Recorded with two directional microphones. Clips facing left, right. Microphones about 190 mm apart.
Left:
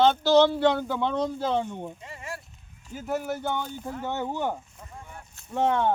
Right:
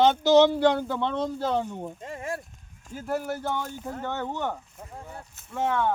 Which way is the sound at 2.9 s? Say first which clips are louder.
Even; centre (ahead or behind).